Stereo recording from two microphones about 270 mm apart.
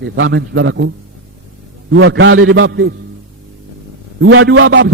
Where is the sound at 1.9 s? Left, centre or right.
Right.